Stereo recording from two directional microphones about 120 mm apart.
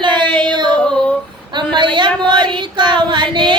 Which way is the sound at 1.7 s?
40° right (ahead or behind).